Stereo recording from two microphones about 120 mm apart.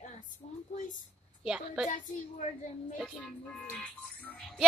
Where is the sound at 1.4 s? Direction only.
5° right (ahead or behind).